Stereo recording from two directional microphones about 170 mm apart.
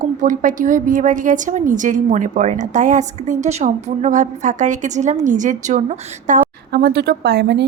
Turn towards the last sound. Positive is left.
turn(degrees=-85)